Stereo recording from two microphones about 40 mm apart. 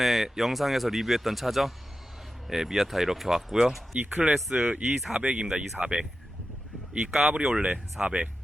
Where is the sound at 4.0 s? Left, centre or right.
Right.